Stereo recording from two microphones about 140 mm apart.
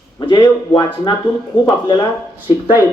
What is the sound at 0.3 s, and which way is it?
Speech, 35° left (ahead or behind).